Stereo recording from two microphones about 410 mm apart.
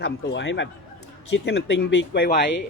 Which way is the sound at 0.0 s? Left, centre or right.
Left.